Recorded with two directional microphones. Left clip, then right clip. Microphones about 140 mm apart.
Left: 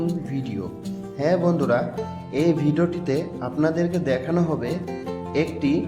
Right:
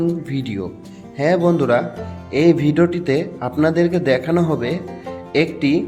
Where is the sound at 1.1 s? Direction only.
25° right (ahead or behind).